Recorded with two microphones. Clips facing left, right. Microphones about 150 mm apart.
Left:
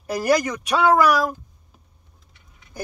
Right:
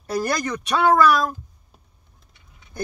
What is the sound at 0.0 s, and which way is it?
Speech, 10° left (ahead or behind).